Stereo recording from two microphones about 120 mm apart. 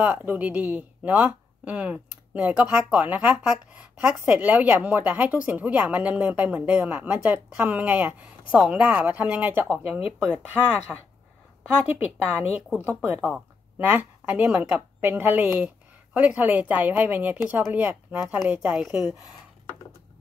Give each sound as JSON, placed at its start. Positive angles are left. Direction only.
{"t": 0.0, "sound": "a woman's voice", "side_deg": -15}